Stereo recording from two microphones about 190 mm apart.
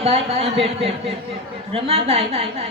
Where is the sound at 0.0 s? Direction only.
30° right (ahead or behind).